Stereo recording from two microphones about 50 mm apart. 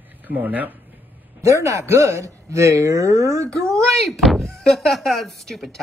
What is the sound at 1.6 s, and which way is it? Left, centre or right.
Speech, right.